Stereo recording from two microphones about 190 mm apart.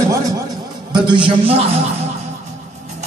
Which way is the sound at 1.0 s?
25° right (ahead or behind).